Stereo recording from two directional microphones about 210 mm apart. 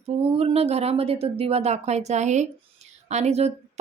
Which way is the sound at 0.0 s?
30° right (ahead or behind).